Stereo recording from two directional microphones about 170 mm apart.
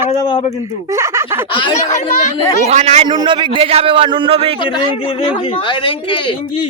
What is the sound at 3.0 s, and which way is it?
A man's voice, 30° right (ahead or behind).